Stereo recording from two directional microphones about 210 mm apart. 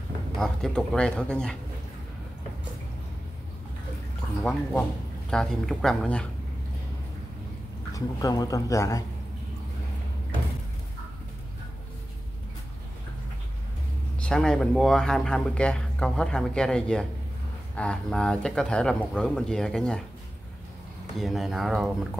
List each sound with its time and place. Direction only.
0.4 s speech: 5° left (ahead or behind)
4.4 s speech: 5° left (ahead or behind)
7.9 s speech: 15° left (ahead or behind)
14.2 s speech: 5° left (ahead or behind)
21.2 s speech: centre (ahead or behind)